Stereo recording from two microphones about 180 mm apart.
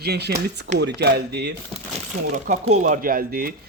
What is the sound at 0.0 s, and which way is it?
A man's voice, 65° right (ahead or behind).